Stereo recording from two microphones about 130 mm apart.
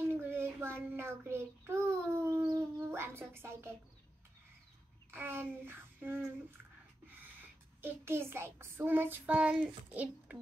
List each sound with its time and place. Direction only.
0.1 s child singing: 15° right (ahead or behind)
2.5 s speech: 20° right (ahead or behind)
5.1 s child singing: 15° right (ahead or behind)
7.8 s child singing: 20° right (ahead or behind)